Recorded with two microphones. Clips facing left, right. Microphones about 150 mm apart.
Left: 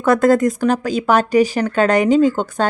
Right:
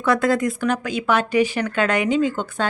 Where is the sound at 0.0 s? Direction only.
45° left (ahead or behind).